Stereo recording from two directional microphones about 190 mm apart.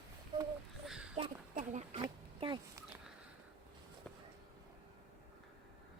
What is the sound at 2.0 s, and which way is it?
Oink, 20° right (ahead or behind).